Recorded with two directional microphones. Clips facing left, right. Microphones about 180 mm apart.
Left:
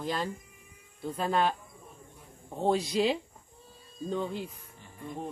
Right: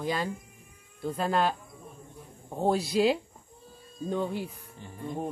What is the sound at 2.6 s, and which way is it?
Speech, 5° right (ahead or behind).